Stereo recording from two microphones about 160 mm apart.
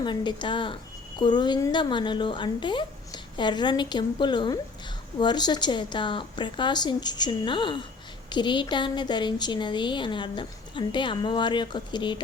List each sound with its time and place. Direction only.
0.0 s a woman's voice: 30° left (ahead or behind)